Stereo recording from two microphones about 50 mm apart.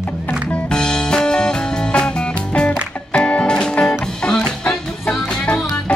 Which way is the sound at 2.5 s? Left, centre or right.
Left.